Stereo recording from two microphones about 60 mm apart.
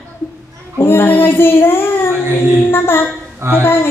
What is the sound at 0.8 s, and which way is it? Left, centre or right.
Child singing, left.